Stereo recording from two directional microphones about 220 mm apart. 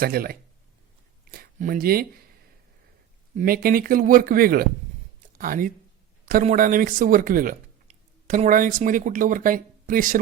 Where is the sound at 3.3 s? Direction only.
40° right (ahead or behind).